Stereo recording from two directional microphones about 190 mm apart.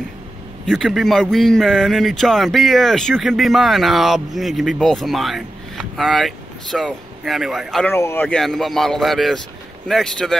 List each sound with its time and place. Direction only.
0.7 s speech: centre (ahead or behind)
7.9 s speech: 10° left (ahead or behind)